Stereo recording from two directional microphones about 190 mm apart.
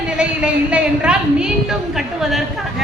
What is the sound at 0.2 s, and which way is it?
A woman's voice, 5° right (ahead or behind).